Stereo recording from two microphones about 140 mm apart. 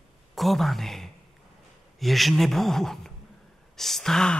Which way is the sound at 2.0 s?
Centre (ahead or behind).